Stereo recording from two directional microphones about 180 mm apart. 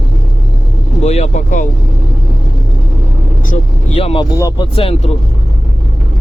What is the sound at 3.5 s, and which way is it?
Speech, 40° left (ahead or behind).